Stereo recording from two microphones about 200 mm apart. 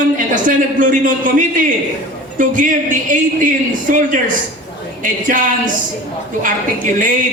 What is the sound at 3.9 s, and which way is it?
A man's voice, 40° right (ahead or behind).